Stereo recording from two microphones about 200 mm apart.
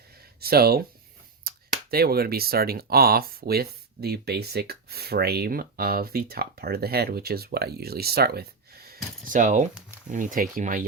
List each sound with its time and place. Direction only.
0.3 s speech: 50° right (ahead or behind)